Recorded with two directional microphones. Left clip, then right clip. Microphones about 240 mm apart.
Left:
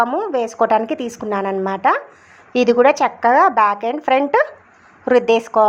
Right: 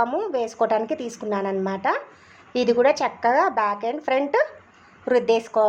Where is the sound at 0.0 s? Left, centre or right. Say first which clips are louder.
Left 5 dB; centre.